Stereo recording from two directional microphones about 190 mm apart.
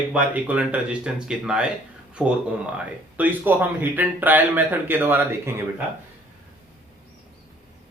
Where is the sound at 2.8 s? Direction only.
10° right (ahead or behind).